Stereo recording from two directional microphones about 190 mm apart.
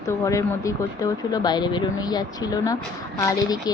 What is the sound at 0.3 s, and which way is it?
A woman's voice, 15° left (ahead or behind).